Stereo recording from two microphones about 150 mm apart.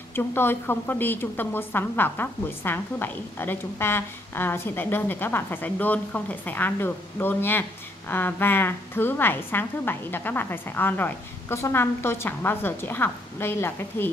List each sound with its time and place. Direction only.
0.1 s a woman's voice: 15° left (ahead or behind)